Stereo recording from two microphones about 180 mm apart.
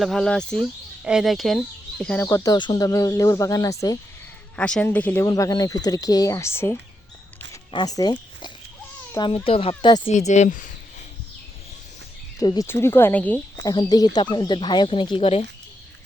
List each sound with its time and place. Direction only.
0.0 s speech: centre (ahead or behind)
2.2 s speech: 20° left (ahead or behind)
4.5 s speech: 5° left (ahead or behind); by 10.1 s 25° left (ahead or behind)
10.1 s speech: 40° left (ahead or behind)
12.4 s speech: 20° left (ahead or behind)
13.7 s speech: 20° left (ahead or behind)